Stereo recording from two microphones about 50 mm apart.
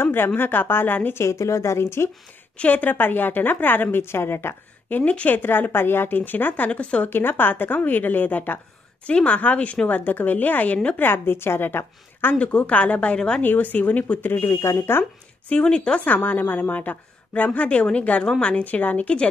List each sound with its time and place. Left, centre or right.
0.0 s speech: left
1.1 s speech: left
2.6 s speech: left
4.8 s speech: left
7.1 s speech: left
9.0 s a woman's voice: left
11.0 s a woman's voice: left
12.4 s a woman's voice: left
13.4 s speech: left
14.4 s speech: left
15.5 s speech: centre
16.0 s speech: left
17.5 s a woman's voice: left
18.6 s speech: left